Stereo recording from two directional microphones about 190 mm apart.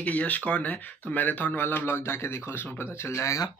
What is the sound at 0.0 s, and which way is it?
A man's voice, 5° left (ahead or behind).